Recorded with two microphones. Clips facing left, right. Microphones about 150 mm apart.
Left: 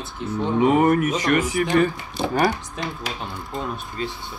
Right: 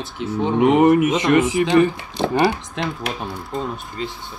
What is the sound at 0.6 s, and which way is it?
Speech, 20° right (ahead or behind).